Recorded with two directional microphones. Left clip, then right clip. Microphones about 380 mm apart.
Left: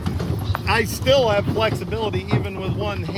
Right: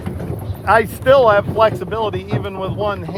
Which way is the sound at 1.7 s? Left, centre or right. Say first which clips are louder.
Right 5 dB; right.